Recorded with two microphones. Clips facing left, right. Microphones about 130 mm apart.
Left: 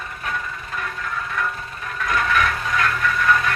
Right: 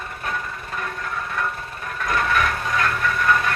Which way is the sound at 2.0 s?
35° right (ahead or behind).